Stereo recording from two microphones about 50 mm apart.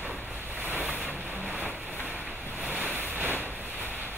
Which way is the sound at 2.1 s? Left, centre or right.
Right.